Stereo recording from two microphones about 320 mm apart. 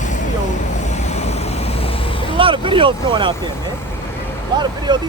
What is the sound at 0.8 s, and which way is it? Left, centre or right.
Vehicle, left.